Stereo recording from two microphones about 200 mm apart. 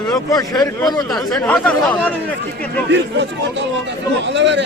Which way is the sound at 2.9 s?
60° right (ahead or behind).